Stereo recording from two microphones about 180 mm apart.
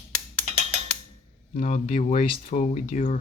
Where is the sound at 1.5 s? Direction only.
45° left (ahead or behind).